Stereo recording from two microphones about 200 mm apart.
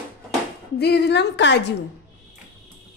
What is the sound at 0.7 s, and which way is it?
Speech, 55° left (ahead or behind).